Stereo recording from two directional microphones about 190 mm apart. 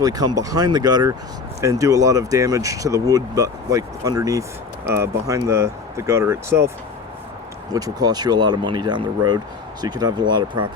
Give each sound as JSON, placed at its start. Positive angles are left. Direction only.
{"t": 0.0, "sound": "speech", "side_deg": -20}
{"t": 7.7, "sound": "speech", "side_deg": -20}